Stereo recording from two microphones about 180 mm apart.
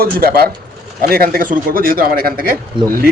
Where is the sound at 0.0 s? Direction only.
55° right (ahead or behind).